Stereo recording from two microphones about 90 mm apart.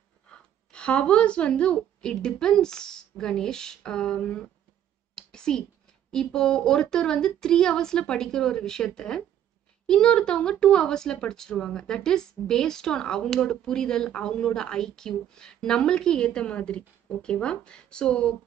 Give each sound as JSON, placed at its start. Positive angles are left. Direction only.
{"t": 0.3, "sound": "a woman's voice", "side_deg": 10}
{"t": 5.1, "sound": "a sound", "side_deg": 10}
{"t": 6.1, "sound": "speech", "side_deg": 10}